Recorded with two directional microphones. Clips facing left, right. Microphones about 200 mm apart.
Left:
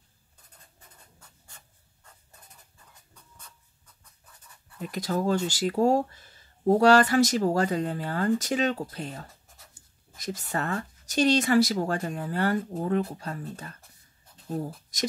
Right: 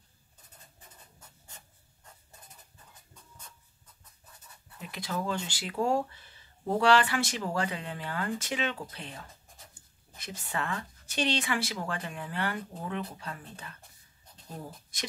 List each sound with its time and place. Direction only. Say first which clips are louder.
3.3 s a sound: even; 10° right (ahead or behind)
4.7 s speech: left 7 dB; 40° left (ahead or behind)
14.9 s speech: left 9 dB; 40° left (ahead or behind)